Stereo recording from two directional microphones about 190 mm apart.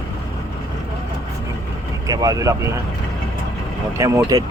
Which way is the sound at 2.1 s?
20° right (ahead or behind).